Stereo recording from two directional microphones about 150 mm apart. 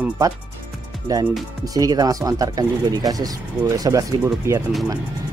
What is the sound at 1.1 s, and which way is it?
Speech, 25° right (ahead or behind).